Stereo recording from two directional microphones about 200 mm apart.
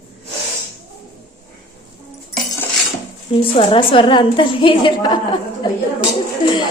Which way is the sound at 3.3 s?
25° left (ahead or behind).